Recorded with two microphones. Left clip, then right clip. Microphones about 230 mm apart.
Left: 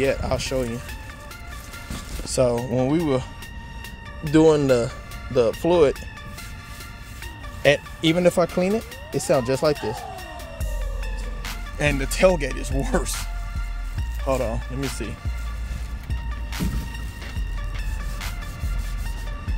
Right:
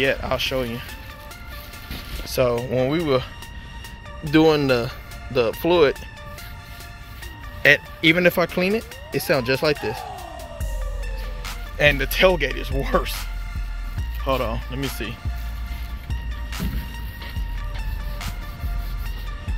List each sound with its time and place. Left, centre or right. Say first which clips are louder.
0.0 s speech: right 2 dB; centre
2.2 s speech: even; centre
4.3 s speech: even; centre
7.6 s speech: right 3 dB; centre
11.8 s speech: right 3 dB; centre
14.2 s speech: right 1 dB; centre